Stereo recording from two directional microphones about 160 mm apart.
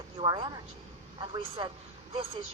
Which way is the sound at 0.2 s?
25° right (ahead or behind).